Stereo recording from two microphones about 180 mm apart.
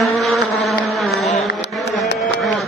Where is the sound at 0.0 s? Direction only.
Centre (ahead or behind).